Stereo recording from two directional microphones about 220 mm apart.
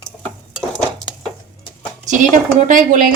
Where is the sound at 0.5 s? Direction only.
Centre (ahead or behind).